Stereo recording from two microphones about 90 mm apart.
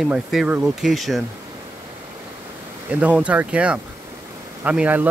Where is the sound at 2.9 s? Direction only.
15° right (ahead or behind).